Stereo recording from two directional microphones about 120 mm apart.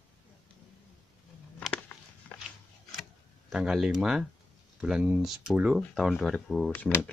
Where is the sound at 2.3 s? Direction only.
15° left (ahead or behind).